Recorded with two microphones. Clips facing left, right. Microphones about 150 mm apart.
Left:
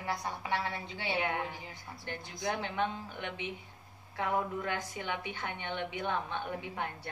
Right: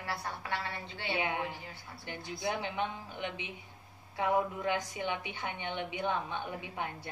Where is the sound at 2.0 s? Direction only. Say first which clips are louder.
Right 1 dB; 15° right (ahead or behind).